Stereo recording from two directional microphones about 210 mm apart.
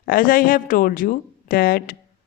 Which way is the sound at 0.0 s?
40° left (ahead or behind).